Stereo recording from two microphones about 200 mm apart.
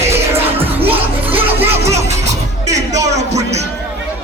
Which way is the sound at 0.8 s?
30° right (ahead or behind).